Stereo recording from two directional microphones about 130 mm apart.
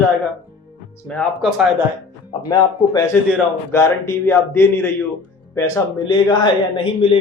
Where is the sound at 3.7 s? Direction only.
20° left (ahead or behind); by 7.2 s 40° left (ahead or behind).